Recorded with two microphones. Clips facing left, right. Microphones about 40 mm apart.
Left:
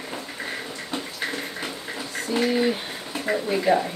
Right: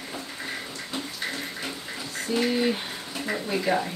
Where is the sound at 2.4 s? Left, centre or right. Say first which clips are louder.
Left 3 dB; centre.